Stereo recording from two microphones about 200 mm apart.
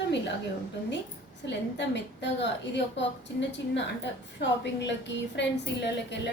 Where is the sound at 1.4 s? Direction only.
60° left (ahead or behind).